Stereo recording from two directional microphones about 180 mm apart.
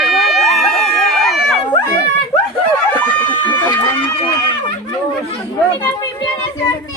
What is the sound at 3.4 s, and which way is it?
Chicken, 25° left (ahead or behind).